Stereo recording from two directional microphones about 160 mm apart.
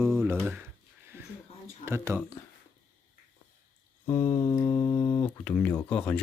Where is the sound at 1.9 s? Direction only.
15° right (ahead or behind).